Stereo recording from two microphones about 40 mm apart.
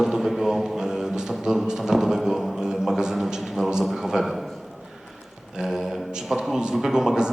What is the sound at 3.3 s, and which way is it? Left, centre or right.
A man's voice, centre.